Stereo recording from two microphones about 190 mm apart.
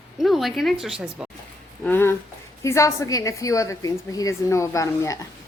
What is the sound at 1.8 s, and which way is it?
A woman's voice, 10° left (ahead or behind).